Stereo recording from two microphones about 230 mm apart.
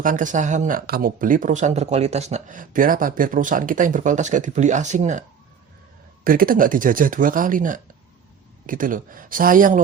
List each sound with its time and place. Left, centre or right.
0.0 s speech: right
6.2 s speech: right